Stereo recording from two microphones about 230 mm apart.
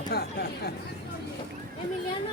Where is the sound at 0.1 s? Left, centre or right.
Left.